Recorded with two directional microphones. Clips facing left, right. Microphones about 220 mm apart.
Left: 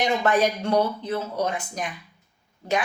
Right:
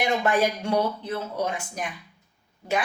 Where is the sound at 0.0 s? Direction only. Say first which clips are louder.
Left 1 dB; 10° right (ahead or behind).